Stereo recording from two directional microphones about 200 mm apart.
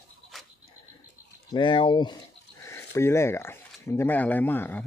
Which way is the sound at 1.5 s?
25° left (ahead or behind).